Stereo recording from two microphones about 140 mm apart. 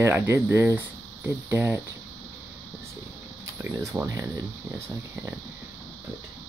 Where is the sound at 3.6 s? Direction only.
20° right (ahead or behind).